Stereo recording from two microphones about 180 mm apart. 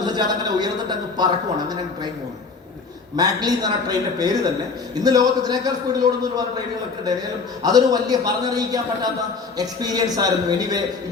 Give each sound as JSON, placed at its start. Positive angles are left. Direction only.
{"t": 0.0, "sound": "a man's voice", "side_deg": -20}
{"t": 3.2, "sound": "a man's voice", "side_deg": -20}
{"t": 7.6, "sound": "a man's voice", "side_deg": -20}